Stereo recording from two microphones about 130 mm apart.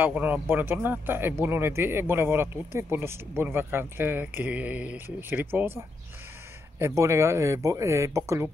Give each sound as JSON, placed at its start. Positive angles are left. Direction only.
{"t": 0.0, "sound": "speech", "side_deg": -15}